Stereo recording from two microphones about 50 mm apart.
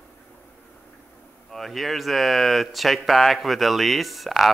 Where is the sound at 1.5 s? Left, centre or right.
Centre.